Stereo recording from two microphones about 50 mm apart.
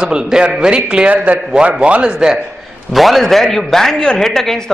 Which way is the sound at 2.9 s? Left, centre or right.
Centre.